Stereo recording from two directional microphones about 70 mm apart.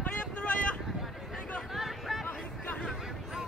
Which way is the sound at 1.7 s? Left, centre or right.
Centre.